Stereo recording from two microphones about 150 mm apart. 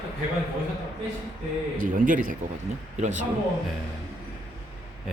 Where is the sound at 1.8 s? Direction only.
60° right (ahead or behind).